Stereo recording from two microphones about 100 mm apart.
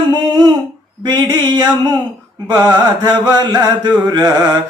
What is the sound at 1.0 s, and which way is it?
Mantra, 40° right (ahead or behind).